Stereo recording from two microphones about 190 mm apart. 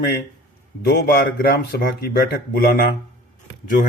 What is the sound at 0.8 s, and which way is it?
Speech, 60° left (ahead or behind).